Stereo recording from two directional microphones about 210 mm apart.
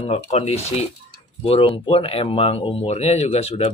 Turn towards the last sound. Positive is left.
turn(degrees=30)  # may be behind; listen again after turning